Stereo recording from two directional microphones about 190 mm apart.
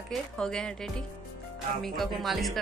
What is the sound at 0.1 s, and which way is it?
Speech, 5° left (ahead or behind).